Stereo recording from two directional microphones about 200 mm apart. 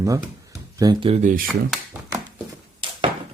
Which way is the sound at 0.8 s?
20° right (ahead or behind).